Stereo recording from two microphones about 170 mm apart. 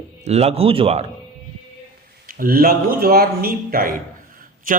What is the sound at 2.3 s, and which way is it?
A man's voice, 60° right (ahead or behind).